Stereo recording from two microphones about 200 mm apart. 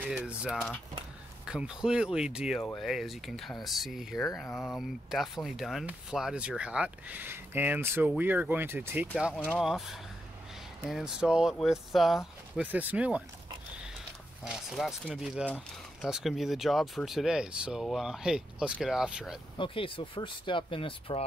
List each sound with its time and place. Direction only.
0.0 s speech: 5° right (ahead or behind)
10.9 s speech: centre (ahead or behind)
14.4 s speech: centre (ahead or behind)
19.6 s speech: 25° left (ahead or behind)